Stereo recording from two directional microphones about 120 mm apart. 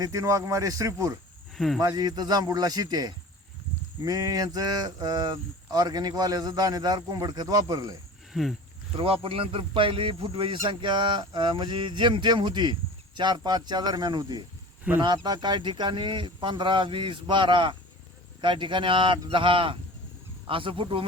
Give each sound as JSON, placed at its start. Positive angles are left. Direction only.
{"t": 0.0, "sound": "speech", "side_deg": -25}
{"t": 1.5, "sound": "speech", "side_deg": 0}
{"t": 1.8, "sound": "speech", "side_deg": -30}
{"t": 8.3, "sound": "a sound", "side_deg": 0}
{"t": 9.0, "sound": "speech", "side_deg": -50}